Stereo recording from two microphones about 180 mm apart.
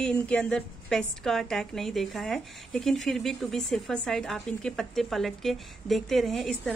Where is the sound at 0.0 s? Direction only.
5° left (ahead or behind).